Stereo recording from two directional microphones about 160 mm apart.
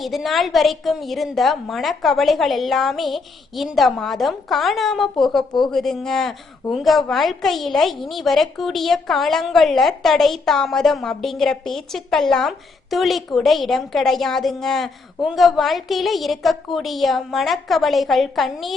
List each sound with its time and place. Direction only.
0.0 s speech: centre (ahead or behind)